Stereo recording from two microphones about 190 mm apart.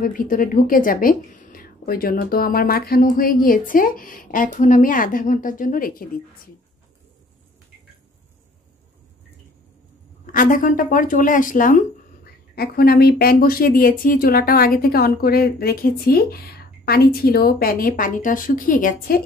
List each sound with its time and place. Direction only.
0.0 s speech: 45° left (ahead or behind)
10.3 s speech: 45° left (ahead or behind)